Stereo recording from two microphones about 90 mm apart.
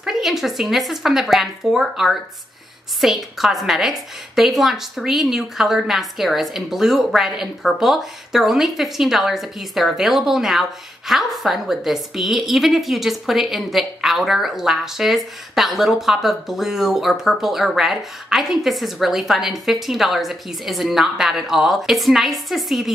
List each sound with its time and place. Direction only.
0.0 s a woman's voice: 5° right (ahead or behind)